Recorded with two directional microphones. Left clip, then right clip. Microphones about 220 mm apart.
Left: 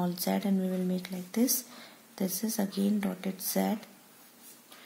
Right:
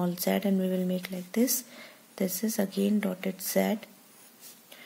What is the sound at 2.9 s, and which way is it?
Speech, 35° right (ahead or behind).